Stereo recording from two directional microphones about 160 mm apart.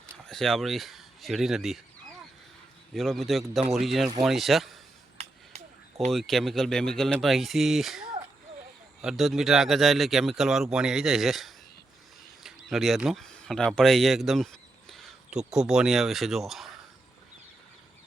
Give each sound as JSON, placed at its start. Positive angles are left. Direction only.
{"t": 0.3, "sound": "speech", "side_deg": 5}
{"t": 2.9, "sound": "speech", "side_deg": 0}
{"t": 5.1, "sound": "a sound", "side_deg": -45}
{"t": 6.1, "sound": "speech", "side_deg": 0}